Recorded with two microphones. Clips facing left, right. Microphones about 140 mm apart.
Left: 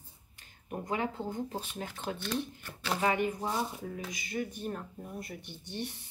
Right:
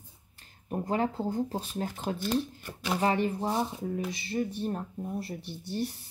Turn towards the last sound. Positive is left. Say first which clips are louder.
# right 6 dB
turn(degrees=-40)  # may be behind; listen again after turning